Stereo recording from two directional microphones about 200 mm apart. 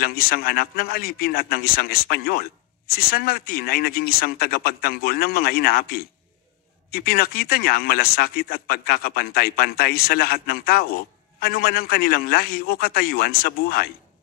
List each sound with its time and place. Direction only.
0.0 s speech: 50° left (ahead or behind)